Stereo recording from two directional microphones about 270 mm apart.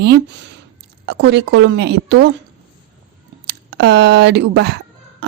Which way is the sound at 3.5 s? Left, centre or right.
Right.